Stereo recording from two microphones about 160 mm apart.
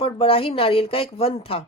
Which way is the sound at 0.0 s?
35° left (ahead or behind).